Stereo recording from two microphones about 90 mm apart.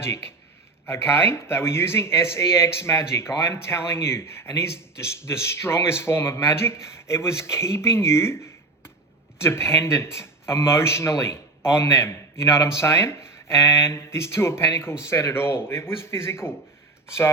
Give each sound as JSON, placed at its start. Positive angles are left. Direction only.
{"t": 0.0, "sound": "speech", "side_deg": 30}